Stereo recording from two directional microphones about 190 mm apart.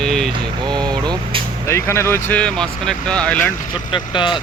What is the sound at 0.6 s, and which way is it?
Speech, 20° right (ahead or behind).